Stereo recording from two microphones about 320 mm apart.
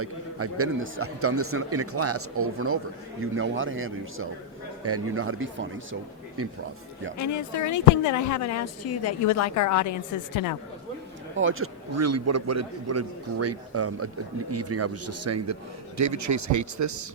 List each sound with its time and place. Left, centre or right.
0.0 s speech: right
7.2 s a woman's voice: left
11.3 s speech: right